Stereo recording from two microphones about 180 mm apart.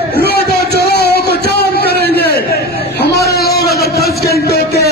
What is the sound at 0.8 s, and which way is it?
Music, 60° left (ahead or behind).